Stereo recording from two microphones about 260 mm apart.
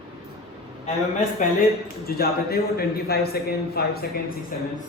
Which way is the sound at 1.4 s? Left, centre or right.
Left.